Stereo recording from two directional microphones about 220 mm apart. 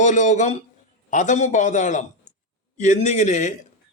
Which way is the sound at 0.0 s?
35° left (ahead or behind).